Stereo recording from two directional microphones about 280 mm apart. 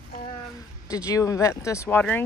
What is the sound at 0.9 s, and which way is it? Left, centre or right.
Speech, centre.